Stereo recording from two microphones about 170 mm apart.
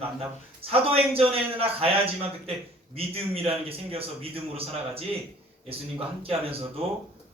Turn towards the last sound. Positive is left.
turn(degrees=-35)  # may be behind; listen again after turning